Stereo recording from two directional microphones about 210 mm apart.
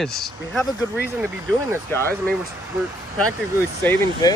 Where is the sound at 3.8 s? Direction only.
10° left (ahead or behind).